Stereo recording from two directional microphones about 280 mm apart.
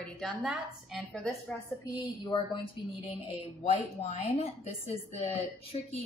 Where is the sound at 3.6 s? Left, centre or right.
Left.